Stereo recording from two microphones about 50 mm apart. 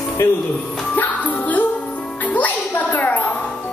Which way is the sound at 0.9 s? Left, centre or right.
Left.